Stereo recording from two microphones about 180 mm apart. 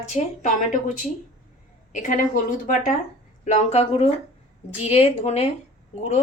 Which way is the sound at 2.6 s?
45° left (ahead or behind).